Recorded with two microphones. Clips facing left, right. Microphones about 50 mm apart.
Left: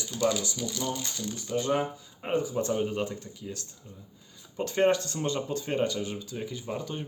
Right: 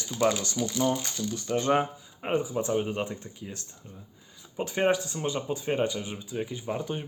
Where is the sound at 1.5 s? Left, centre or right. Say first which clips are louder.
Right 3 dB; right.